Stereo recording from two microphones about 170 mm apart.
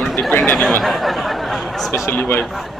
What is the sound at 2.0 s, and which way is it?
Speech, 10° left (ahead or behind).